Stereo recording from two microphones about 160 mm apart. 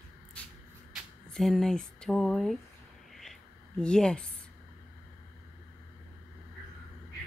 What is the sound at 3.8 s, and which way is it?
Speech, 5° left (ahead or behind).